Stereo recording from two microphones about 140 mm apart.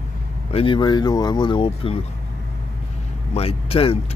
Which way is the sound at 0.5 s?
35° left (ahead or behind).